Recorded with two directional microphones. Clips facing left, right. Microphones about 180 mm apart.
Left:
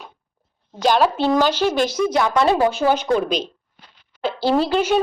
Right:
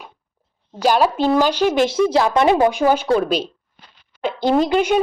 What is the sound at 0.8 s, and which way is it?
A woman's voice, 10° right (ahead or behind).